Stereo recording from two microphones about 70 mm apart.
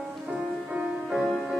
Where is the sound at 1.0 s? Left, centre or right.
Centre.